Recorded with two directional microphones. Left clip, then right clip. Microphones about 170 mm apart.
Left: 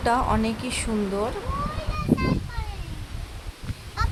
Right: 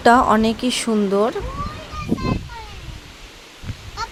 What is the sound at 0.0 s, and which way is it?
Speech, 45° right (ahead or behind).